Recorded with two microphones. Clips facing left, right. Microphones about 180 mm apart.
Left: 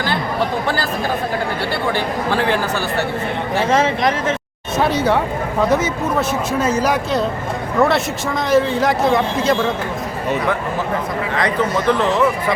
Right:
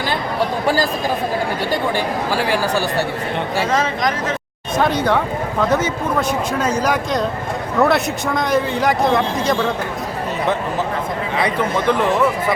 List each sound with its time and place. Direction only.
1.7 s a man's voice: 10° right (ahead or behind)
3.7 s speech: 25° left (ahead or behind)
4.8 s a man's voice: 10° left (ahead or behind)
11.3 s a man's voice: 15° right (ahead or behind)